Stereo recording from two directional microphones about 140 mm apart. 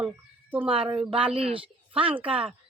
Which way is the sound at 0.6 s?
40° right (ahead or behind).